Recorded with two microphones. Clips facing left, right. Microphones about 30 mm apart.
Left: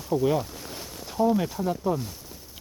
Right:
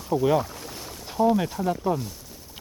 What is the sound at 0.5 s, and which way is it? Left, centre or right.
Boat, centre.